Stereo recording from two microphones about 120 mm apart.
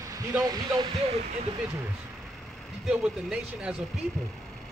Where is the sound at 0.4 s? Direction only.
35° right (ahead or behind).